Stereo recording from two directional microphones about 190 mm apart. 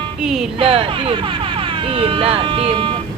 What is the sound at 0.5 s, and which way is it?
Speech, 30° right (ahead or behind).